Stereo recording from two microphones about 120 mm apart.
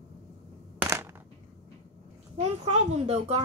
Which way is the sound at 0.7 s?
20° right (ahead or behind).